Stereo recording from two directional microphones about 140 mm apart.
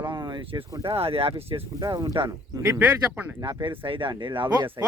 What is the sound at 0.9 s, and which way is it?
Speech, 45° right (ahead or behind).